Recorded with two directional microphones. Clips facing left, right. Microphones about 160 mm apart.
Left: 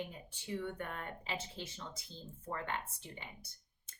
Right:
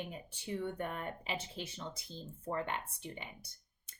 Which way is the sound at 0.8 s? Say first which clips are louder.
Right 4 dB; 15° right (ahead or behind).